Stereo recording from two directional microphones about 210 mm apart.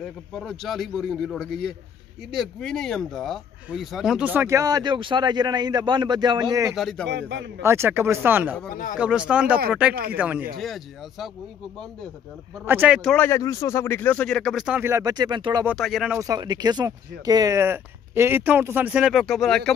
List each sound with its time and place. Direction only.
0.3 s a man's voice: centre (ahead or behind); by 6.7 s 20° right (ahead or behind)
6.7 s a man's voice: centre (ahead or behind)
7.1 s a man's voice: 55° right (ahead or behind)
7.6 s a man's voice: 10° right (ahead or behind)
12.6 s a man's voice: 10° right (ahead or behind)
15.6 s a man's voice: centre (ahead or behind)
16.2 s speech: 15° right (ahead or behind); by 19.7 s centre (ahead or behind)